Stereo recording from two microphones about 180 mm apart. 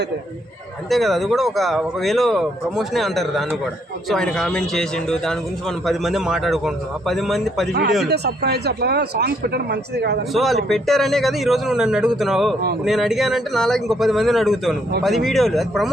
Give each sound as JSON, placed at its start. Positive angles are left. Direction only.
{"t": 0.9, "sound": "speech", "side_deg": 0}
{"t": 8.0, "sound": "speech", "side_deg": -65}
{"t": 10.3, "sound": "speech", "side_deg": 0}